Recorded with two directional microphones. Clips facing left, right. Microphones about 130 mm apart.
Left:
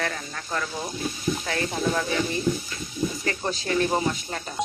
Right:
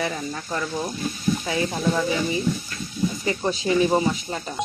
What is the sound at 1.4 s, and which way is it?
Speech, 10° right (ahead or behind).